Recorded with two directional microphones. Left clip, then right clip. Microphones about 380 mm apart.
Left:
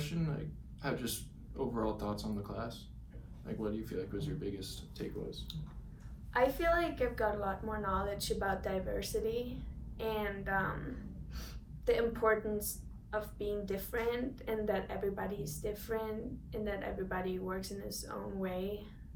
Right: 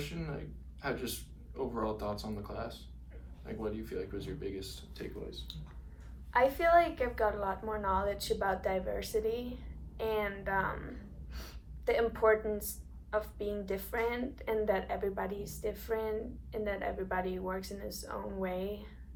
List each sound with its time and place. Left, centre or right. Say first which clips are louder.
0.2 s a woman's voice: even; centre
11.9 s a woman's voice: right 3 dB; centre